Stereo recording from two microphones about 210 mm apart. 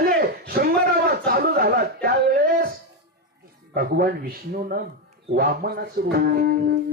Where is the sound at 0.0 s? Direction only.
45° right (ahead or behind).